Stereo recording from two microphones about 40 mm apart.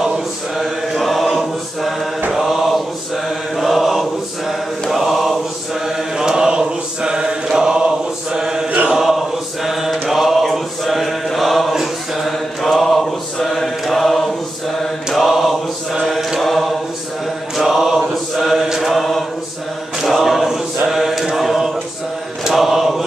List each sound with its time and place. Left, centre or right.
0.6 s chant: centre
2.3 s mantra: centre
8.9 s chant: centre
11.2 s mantra: centre
20.0 s choir: centre
20.9 s mantra: centre